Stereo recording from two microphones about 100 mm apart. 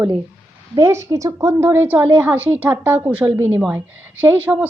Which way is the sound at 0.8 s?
30° right (ahead or behind).